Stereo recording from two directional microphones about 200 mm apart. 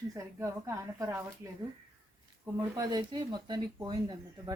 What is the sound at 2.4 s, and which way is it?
Speech, 20° right (ahead or behind).